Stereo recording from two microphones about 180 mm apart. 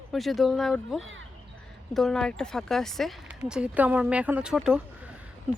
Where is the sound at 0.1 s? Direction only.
Centre (ahead or behind).